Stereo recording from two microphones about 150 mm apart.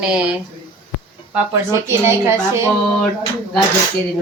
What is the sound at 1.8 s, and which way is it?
Speech, 20° right (ahead or behind).